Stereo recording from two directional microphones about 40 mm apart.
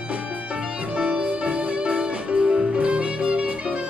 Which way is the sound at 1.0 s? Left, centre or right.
Right.